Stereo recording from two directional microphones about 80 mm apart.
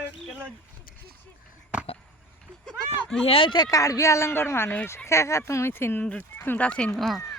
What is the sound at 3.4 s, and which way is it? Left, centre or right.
Speech, left.